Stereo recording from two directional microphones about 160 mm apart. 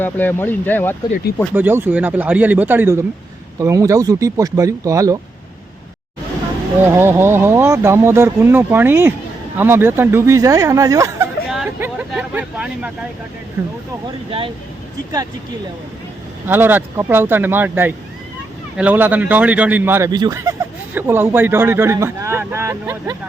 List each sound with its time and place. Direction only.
0.0 s speech: 10° left (ahead or behind)
1.5 s speech: 10° right (ahead or behind)
6.9 s speech: 15° right (ahead or behind)
11.4 s chatter: centre (ahead or behind)
11.8 s speech: 10° right (ahead or behind)
14.3 s speech: 35° right (ahead or behind)
16.5 s speech: 10° right (ahead or behind)
20.1 s speech: 25° right (ahead or behind)